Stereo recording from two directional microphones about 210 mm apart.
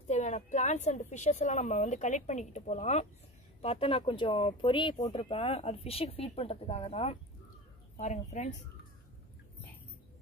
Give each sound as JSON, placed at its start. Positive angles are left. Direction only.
{"t": 0.1, "sound": "a woman's voice", "side_deg": 35}